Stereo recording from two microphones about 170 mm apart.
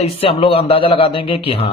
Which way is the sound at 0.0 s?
35° left (ahead or behind).